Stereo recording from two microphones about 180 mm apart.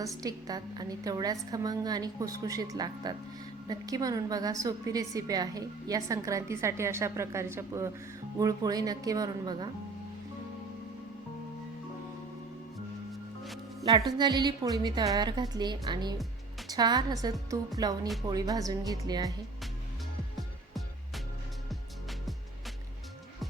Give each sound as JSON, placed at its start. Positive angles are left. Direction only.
{"t": 0.2, "sound": "a woman's voice", "side_deg": -20}
{"t": 14.2, "sound": "a woman's voice", "side_deg": -25}